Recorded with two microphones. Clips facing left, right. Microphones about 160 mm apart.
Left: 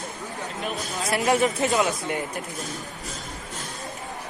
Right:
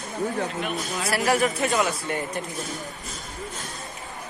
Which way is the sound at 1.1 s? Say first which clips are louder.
Left 1 dB; 20° left (ahead or behind).